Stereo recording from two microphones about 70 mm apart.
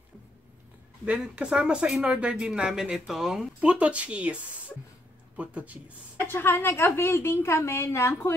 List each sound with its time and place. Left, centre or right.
1.3 s speech: centre
3.6 s speech: centre
6.1 s a woman's voice: left